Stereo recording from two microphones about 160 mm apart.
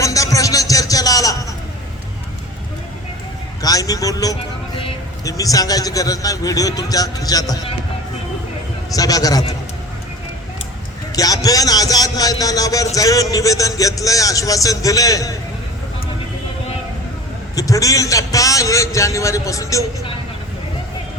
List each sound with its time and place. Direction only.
0.0 s a sound: 20° left (ahead or behind)
3.6 s vehicle: 20° left (ahead or behind)
5.2 s a man's voice: 20° left (ahead or behind)
9.0 s a man's voice: 25° left (ahead or behind)
11.1 s a sound: 20° left (ahead or behind)
13.3 s a man's voice: 20° left (ahead or behind)
17.5 s a man's voice: 20° left (ahead or behind)